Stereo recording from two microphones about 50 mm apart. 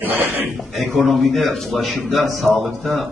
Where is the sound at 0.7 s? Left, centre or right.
Centre.